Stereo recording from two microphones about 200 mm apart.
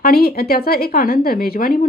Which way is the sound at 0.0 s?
50° left (ahead or behind).